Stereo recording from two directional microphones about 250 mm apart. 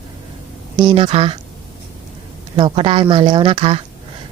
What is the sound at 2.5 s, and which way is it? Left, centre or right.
Speech, centre.